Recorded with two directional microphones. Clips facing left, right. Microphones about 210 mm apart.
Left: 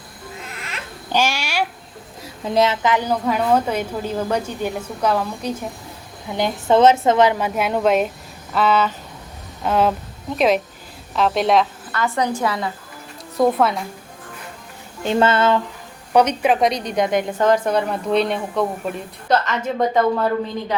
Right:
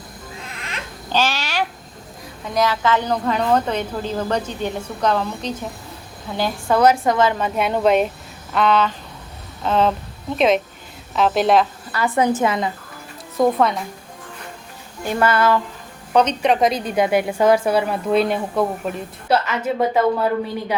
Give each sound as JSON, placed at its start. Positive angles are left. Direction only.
{"t": 0.6, "sound": "a sound", "side_deg": 10}
{"t": 2.4, "sound": "a woman's voice", "side_deg": 25}
{"t": 12.0, "sound": "a woman's voice", "side_deg": -20}
{"t": 13.3, "sound": "a woman's voice", "side_deg": 0}
{"t": 15.0, "sound": "speech", "side_deg": 25}
{"t": 16.1, "sound": "a woman's voice", "side_deg": 10}